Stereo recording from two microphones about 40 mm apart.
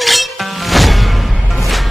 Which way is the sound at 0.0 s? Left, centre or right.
Centre.